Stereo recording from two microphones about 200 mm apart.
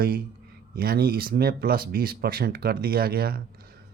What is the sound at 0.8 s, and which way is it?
Speech, 50° right (ahead or behind).